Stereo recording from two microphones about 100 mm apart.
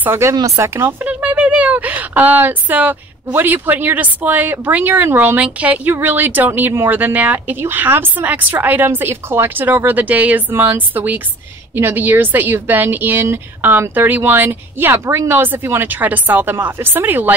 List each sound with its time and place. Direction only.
0.0 s a woman's voice: 25° right (ahead or behind)
1.0 s a woman's voice: 15° right (ahead or behind)